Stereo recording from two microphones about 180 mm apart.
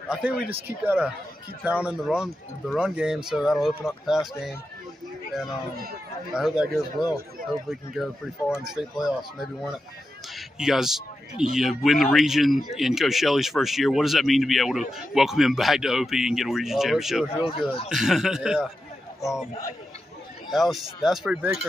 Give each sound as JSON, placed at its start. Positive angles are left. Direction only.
{"t": 0.1, "sound": "speech", "side_deg": -5}
{"t": 6.3, "sound": "speech", "side_deg": -5}
{"t": 17.4, "sound": "speech", "side_deg": 30}
{"t": 17.8, "sound": "speech", "side_deg": 0}
{"t": 20.5, "sound": "speech", "side_deg": 0}